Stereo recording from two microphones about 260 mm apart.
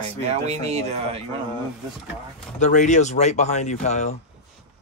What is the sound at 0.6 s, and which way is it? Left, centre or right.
Speech, right.